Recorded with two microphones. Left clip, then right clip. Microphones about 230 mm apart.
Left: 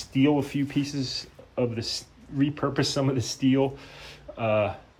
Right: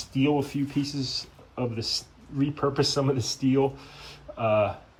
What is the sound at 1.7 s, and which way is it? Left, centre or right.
Speech, centre.